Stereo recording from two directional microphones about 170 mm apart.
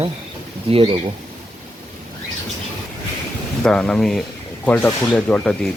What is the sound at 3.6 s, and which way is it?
Speech, 5° left (ahead or behind).